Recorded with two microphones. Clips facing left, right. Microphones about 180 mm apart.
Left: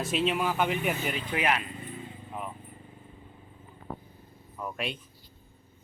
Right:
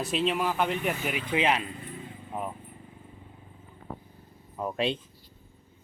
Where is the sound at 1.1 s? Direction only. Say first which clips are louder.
Right 2 dB; 20° right (ahead or behind).